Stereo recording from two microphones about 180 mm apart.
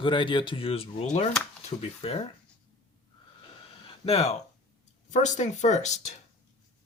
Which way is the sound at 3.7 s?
35° left (ahead or behind).